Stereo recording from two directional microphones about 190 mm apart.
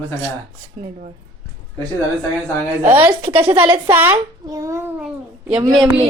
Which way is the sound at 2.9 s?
10° right (ahead or behind).